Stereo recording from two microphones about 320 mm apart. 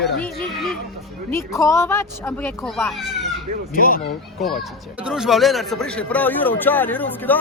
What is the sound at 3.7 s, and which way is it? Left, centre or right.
Speech, left.